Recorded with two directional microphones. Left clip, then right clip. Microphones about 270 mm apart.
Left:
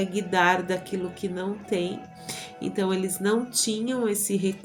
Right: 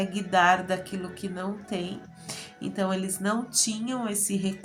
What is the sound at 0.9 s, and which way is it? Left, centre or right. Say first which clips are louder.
Speech: left 5 dB; centre.